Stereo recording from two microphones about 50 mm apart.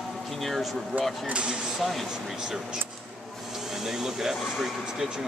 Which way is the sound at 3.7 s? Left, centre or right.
Centre.